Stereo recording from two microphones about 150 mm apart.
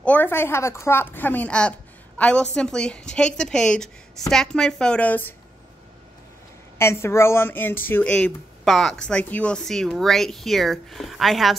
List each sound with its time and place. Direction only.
0.0 s a woman's voice: 10° left (ahead or behind)
6.8 s speech: 15° left (ahead or behind); by 11.5 s centre (ahead or behind)